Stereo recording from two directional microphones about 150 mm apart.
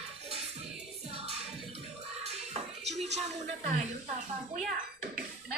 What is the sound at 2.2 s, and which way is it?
Music, 45° right (ahead or behind).